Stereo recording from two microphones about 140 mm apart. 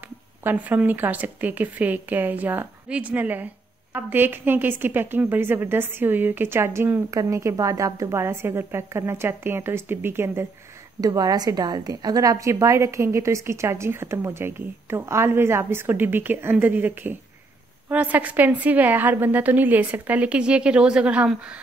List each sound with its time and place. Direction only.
0.4 s a woman's voice: 15° right (ahead or behind)